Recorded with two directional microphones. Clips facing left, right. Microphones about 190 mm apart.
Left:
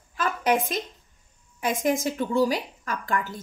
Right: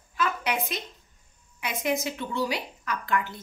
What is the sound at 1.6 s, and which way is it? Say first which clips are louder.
Speech: left 4 dB; 45° left (ahead or behind).